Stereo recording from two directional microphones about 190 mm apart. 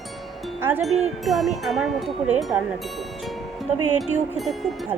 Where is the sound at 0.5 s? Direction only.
10° right (ahead or behind).